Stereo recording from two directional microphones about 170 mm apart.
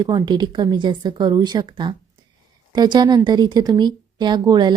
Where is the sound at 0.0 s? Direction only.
25° right (ahead or behind).